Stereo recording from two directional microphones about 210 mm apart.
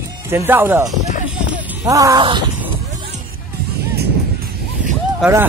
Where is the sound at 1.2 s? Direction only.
5° right (ahead or behind); by 2.5 s 20° right (ahead or behind).